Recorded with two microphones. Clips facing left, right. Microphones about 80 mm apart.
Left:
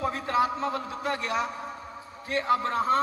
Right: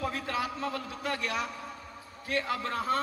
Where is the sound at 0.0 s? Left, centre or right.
Left.